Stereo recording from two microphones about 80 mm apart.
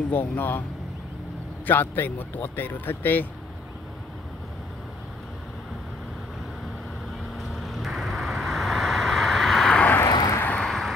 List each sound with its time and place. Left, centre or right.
0.1 s speech: left
1.7 s speech: left
7.3 s vehicle: centre
10.0 s vehicle: left
10.4 s vehicle: centre